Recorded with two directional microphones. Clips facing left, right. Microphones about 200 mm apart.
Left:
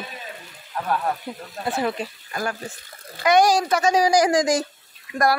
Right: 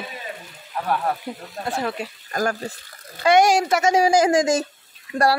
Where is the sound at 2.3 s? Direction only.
40° right (ahead or behind).